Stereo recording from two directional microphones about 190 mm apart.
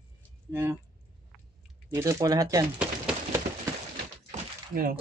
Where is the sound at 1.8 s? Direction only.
15° right (ahead or behind).